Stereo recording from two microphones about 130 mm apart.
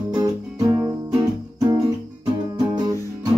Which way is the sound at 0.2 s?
30° right (ahead or behind).